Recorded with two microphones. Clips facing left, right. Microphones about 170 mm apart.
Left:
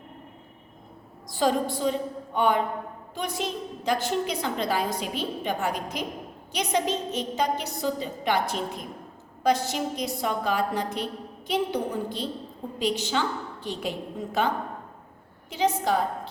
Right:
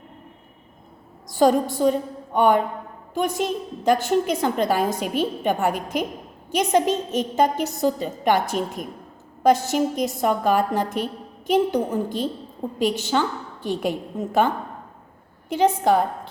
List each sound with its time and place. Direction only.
1.3 s a woman's voice: 45° right (ahead or behind)